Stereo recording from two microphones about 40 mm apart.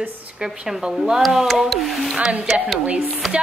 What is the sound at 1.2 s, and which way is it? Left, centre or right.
Speech, centre.